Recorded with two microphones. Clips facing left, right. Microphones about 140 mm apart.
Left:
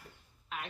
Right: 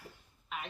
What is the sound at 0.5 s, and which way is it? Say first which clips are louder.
Speech: even; centre (ahead or behind).